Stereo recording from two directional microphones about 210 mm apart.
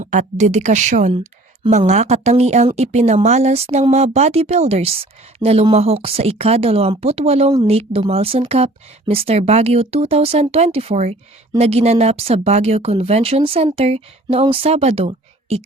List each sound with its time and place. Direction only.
0.0 s speech: 35° right (ahead or behind)